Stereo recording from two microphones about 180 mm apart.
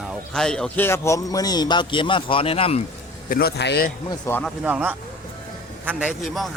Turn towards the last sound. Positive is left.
turn(degrees=0)  # may be behind; listen again after turning